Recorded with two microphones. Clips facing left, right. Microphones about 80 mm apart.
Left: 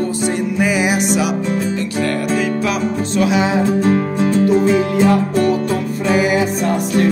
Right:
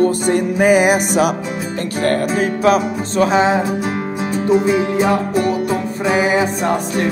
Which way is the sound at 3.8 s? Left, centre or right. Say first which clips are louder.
Left 6 dB; centre.